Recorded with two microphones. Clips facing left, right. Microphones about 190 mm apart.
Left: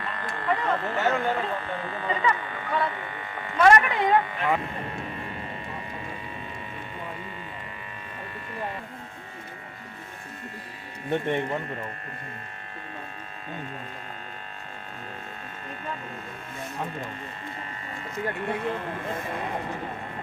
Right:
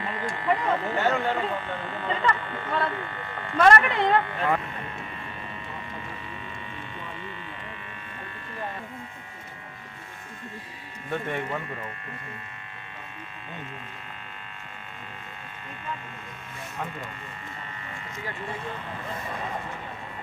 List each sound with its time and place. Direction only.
0.0 s a sound: 10° right (ahead or behind)
0.9 s speech: centre (ahead or behind)
11.1 s speech: 25° left (ahead or behind)
18.3 s speech: 60° left (ahead or behind)